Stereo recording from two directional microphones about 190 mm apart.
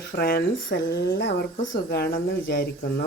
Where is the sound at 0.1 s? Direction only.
55° left (ahead or behind).